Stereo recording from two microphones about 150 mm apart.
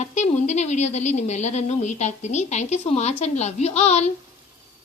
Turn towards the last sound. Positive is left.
turn(degrees=45)  # may be behind; listen again after turning